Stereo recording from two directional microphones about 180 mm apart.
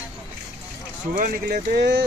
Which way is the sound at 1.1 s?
50° right (ahead or behind).